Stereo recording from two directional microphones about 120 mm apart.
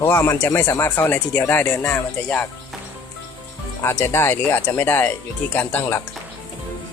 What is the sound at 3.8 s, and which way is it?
Speech, 20° left (ahead or behind).